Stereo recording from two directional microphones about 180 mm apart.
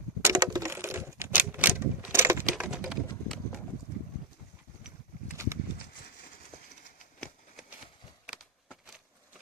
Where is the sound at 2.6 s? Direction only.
5° right (ahead or behind).